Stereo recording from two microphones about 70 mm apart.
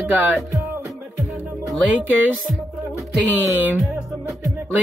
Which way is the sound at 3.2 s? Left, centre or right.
Right.